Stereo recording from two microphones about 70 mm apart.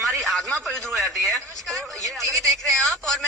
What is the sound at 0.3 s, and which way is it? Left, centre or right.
A man's voice, centre.